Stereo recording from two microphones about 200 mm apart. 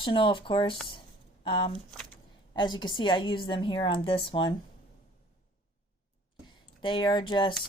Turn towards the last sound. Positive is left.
turn(degrees=25)  # may be behind; listen again after turning